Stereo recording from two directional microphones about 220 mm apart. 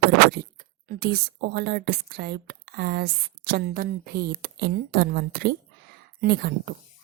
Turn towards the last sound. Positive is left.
turn(degrees=-45)  # may be behind; listen again after turning